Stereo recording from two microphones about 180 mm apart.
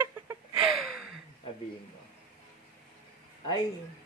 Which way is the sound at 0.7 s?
Centre (ahead or behind).